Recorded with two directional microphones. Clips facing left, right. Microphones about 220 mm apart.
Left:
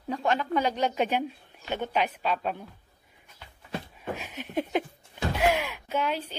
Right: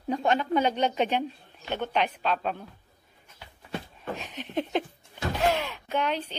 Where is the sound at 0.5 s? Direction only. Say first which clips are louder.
Right 2 dB; 25° right (ahead or behind).